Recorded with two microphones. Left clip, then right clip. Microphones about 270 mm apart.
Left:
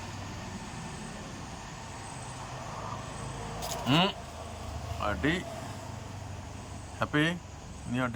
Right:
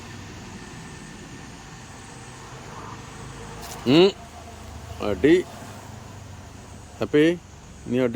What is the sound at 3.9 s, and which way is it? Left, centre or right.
Vehicle, centre.